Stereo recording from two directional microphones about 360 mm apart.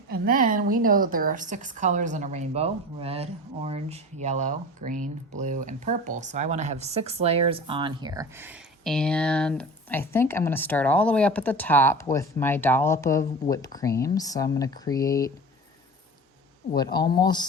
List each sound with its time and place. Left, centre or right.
0.1 s a woman's voice: right; by 15.3 s centre
16.7 s speech: centre